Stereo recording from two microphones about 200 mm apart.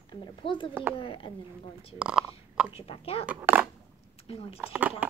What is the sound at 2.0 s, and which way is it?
Speech, 5° right (ahead or behind).